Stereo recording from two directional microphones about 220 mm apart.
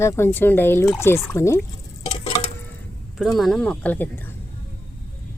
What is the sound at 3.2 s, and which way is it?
Speech, centre (ahead or behind).